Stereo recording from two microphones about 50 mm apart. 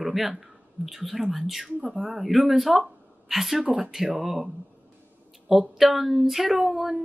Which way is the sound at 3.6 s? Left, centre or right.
Right.